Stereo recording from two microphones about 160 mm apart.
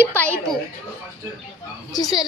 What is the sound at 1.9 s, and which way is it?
Speech, 25° left (ahead or behind).